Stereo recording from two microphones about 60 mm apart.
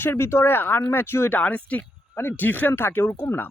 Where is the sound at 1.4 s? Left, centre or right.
Left.